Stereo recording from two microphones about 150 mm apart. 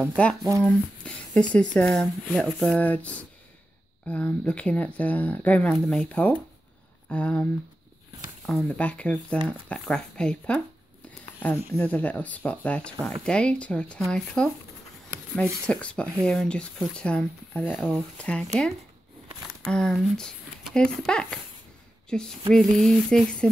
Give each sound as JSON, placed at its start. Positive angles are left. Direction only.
{"t": 0.0, "sound": "a sound", "side_deg": 5}
{"t": 0.4, "sound": "speech", "side_deg": -20}
{"t": 0.7, "sound": "speech", "side_deg": 5}
{"t": 8.5, "sound": "speech", "side_deg": 5}
{"t": 9.7, "sound": "a sound", "side_deg": 5}
{"t": 11.7, "sound": "speech", "side_deg": 10}
{"t": 15.4, "sound": "speech", "side_deg": -15}
{"t": 15.7, "sound": "speech", "side_deg": 10}
{"t": 19.6, "sound": "speech", "side_deg": 5}
{"t": 22.1, "sound": "a sound", "side_deg": 5}